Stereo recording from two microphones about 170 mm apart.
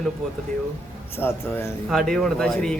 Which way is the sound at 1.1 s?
15° left (ahead or behind).